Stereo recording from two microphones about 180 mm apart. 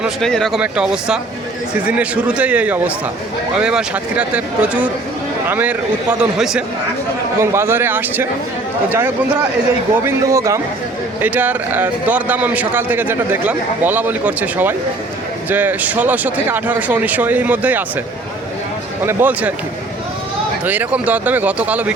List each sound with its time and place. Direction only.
0.0 s a man's voice: 5° left (ahead or behind)
10.1 s a man's voice: 15° right (ahead or behind)
19.0 s a man's voice: 10° right (ahead or behind)
20.7 s a man's voice: 10° right (ahead or behind)